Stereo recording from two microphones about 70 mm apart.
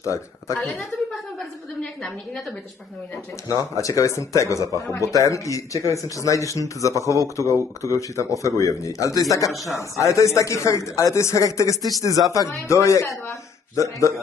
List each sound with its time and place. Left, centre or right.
0.0 s speech: left
0.6 s a woman's voice: centre
3.4 s speech: left